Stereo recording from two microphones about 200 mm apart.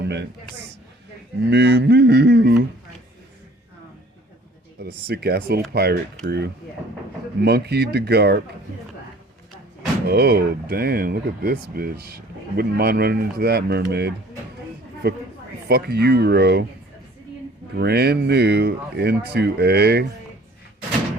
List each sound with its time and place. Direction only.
0.0 s a man's voice: 60° right (ahead or behind)
1.4 s speech: 60° right (ahead or behind)
4.8 s speech: 55° right (ahead or behind)
7.4 s speech: 55° right (ahead or behind)
10.1 s speech: 50° right (ahead or behind)
17.7 s speech: 55° right (ahead or behind)